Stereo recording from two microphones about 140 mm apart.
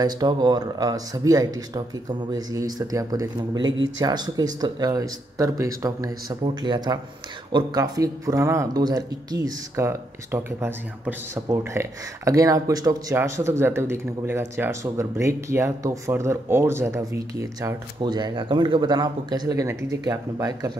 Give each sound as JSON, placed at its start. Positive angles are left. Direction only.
{"t": 0.0, "sound": "speech", "side_deg": -30}